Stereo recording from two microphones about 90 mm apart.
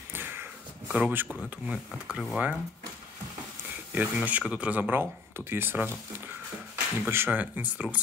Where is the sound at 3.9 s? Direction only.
15° right (ahead or behind).